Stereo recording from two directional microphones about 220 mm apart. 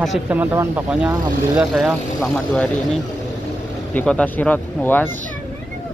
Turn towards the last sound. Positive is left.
turn(degrees=10)  # may be behind; listen again after turning